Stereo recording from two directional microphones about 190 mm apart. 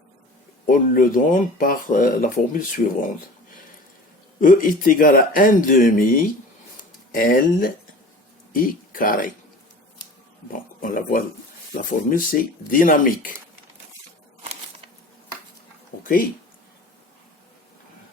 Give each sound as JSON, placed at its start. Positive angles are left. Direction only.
{"t": 0.7, "sound": "speech", "side_deg": 45}
{"t": 4.4, "sound": "speech", "side_deg": 45}
{"t": 10.8, "sound": "speech", "side_deg": 45}